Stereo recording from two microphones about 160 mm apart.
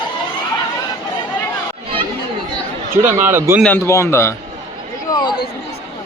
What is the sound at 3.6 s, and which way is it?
Speech, 15° left (ahead or behind).